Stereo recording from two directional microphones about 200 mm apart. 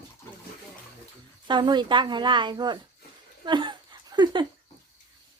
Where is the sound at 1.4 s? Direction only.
20° right (ahead or behind).